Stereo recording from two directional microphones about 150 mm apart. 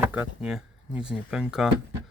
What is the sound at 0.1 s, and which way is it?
Speech, 10° right (ahead or behind).